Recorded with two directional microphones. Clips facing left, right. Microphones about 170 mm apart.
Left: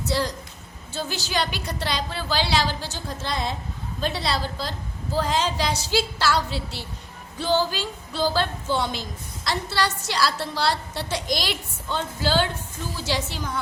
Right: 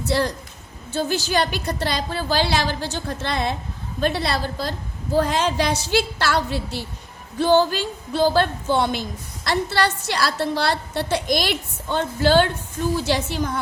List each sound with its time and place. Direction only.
0.1 s a woman's voice: 60° right (ahead or behind)